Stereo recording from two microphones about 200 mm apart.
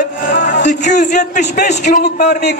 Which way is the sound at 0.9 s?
40° left (ahead or behind).